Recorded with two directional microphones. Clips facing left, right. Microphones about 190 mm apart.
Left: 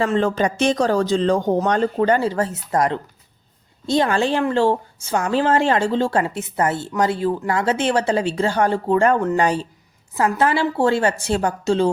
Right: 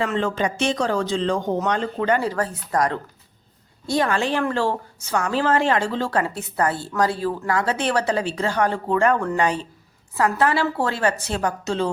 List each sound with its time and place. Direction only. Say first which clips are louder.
0.0 s a woman's voice: left 4 dB; 40° left (ahead or behind)